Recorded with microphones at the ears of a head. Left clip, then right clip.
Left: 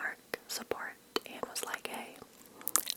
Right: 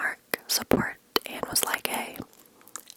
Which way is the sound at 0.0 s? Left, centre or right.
Right.